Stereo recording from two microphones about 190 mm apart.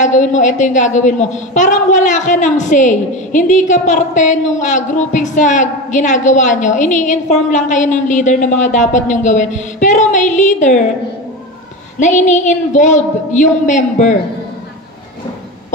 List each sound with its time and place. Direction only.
0.0 s a woman's voice: 40° left (ahead or behind)
12.0 s a woman's voice: 40° left (ahead or behind)